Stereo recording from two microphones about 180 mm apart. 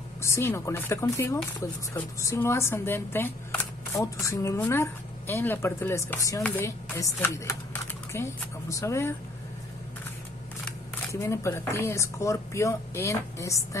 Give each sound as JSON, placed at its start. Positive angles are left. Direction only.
{"t": 0.2, "sound": "speech", "side_deg": 15}
{"t": 11.1, "sound": "speech", "side_deg": 15}